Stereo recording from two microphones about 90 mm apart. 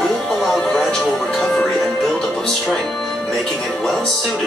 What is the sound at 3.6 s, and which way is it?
Speech, 5° left (ahead or behind).